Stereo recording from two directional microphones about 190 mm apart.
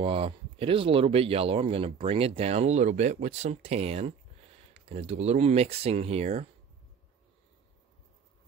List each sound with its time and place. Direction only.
0.0 s speech: 30° right (ahead or behind)